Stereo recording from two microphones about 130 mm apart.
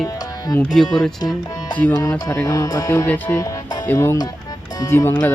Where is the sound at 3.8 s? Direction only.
15° left (ahead or behind).